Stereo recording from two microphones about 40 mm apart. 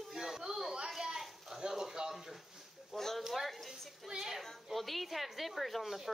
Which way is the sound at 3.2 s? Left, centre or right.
Centre.